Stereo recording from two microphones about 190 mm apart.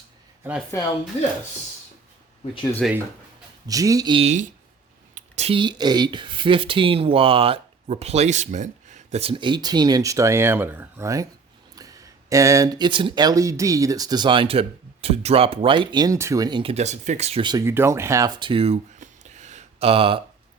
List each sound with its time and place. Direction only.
0.7 s speech: 15° left (ahead or behind)
1.1 s speech: 35° left (ahead or behind)
2.8 s speech: centre (ahead or behind)
3.7 s speech: 20° right (ahead or behind)